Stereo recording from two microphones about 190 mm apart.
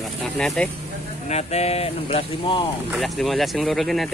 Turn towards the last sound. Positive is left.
turn(degrees=0)  # may be behind; listen again after turning